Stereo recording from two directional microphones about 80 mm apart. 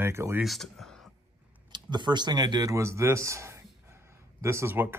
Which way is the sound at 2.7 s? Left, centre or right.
Right.